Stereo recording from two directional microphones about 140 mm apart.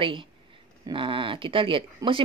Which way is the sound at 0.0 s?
35° right (ahead or behind).